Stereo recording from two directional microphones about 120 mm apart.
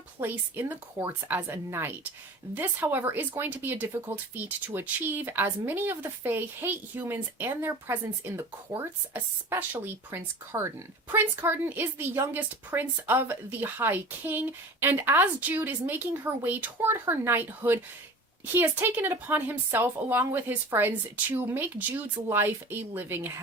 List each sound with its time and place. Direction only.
0.2 s a woman's voice: 20° right (ahead or behind)